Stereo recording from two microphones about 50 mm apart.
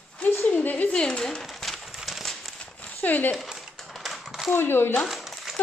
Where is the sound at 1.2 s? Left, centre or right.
Centre.